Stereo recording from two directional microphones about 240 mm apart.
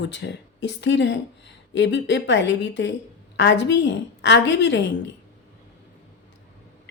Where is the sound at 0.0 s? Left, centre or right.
Left.